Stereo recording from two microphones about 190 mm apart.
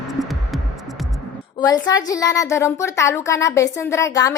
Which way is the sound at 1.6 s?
20° left (ahead or behind).